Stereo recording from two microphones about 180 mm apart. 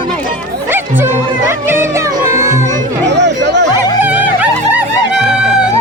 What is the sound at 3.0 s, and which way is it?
Chatter, 75° right (ahead or behind).